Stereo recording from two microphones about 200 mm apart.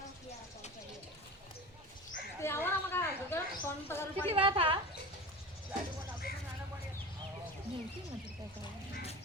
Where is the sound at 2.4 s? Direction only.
10° left (ahead or behind).